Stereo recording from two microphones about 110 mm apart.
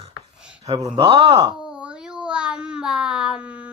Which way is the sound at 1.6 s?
10° right (ahead or behind).